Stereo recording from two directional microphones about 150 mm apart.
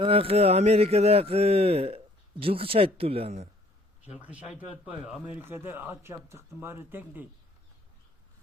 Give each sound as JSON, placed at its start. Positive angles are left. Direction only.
{"t": 0.0, "sound": "speech", "side_deg": -40}
{"t": 4.2, "sound": "a man's voice", "side_deg": -10}